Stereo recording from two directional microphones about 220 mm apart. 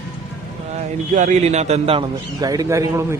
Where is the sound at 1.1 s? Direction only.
30° right (ahead or behind).